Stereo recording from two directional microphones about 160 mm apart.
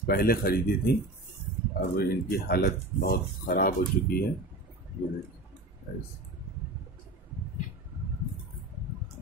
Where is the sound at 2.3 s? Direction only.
75° left (ahead or behind).